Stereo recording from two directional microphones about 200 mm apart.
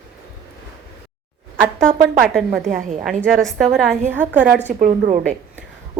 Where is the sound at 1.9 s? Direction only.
40° right (ahead or behind).